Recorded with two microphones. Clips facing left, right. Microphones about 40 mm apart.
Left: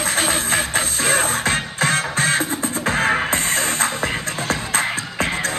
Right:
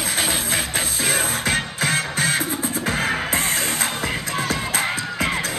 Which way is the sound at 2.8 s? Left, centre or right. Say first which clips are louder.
Left 4 dB; left.